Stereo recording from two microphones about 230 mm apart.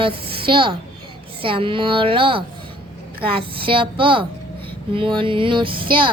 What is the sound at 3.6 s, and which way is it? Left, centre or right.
Speech, right.